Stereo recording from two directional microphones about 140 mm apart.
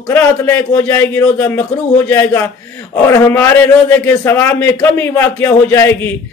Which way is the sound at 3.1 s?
20° left (ahead or behind).